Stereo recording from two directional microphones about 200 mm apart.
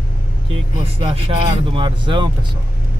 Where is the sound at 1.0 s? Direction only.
25° right (ahead or behind).